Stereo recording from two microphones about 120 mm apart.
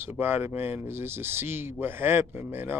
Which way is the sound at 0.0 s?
15° right (ahead or behind).